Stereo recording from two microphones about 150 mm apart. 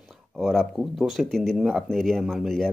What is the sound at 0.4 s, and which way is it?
Speech, centre (ahead or behind).